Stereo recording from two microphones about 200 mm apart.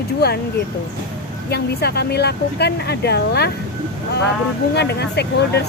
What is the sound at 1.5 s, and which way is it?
A woman's voice, 55° left (ahead or behind).